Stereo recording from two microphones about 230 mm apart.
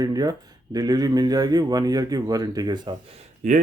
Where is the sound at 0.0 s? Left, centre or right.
Centre.